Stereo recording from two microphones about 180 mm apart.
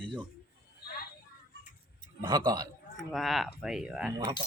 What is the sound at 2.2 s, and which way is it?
Speech, 25° right (ahead or behind).